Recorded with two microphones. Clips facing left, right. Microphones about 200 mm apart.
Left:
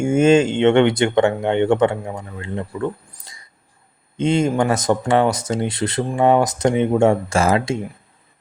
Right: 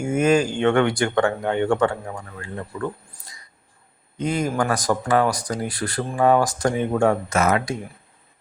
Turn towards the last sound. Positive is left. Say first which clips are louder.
# left 3 dB
turn(degrees=25)  # may be behind; listen again after turning